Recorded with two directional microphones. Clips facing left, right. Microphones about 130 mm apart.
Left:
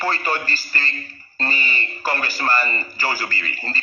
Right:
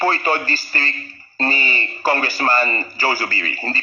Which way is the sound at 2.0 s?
30° right (ahead or behind).